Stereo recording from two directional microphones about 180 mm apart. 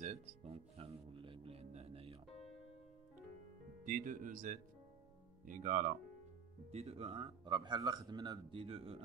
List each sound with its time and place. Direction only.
0.0 s music: 35° right (ahead or behind)
3.8 s speech: 45° right (ahead or behind)
6.7 s speech: 35° right (ahead or behind)